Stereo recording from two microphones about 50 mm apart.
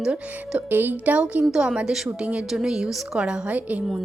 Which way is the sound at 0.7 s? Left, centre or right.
Right.